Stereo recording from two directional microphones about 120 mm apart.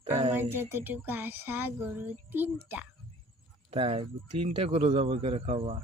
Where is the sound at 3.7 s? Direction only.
50° right (ahead or behind).